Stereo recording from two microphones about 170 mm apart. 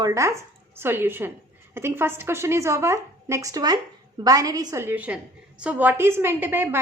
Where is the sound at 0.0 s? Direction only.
20° right (ahead or behind).